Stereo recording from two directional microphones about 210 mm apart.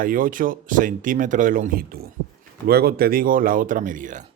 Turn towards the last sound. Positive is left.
turn(degrees=-40)  # may be behind; listen again after turning